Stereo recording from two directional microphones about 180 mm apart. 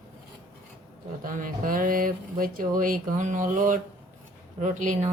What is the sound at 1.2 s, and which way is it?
Speech, 50° right (ahead or behind).